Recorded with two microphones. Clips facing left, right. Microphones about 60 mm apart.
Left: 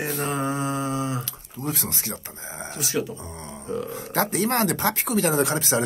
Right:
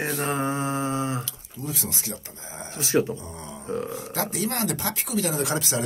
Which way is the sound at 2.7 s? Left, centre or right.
Right.